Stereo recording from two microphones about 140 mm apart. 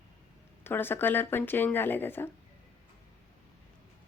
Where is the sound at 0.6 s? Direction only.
15° left (ahead or behind).